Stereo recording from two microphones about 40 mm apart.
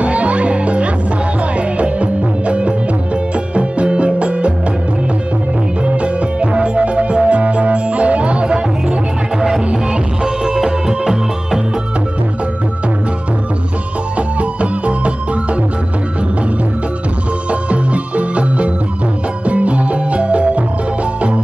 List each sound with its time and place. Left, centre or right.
0.0 s music: right
5.9 s music: right
10.2 s music: centre
14.1 s music: right
17.5 s music: right